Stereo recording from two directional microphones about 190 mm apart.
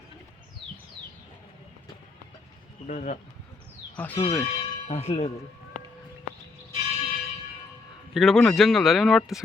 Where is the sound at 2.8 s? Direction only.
40° left (ahead or behind).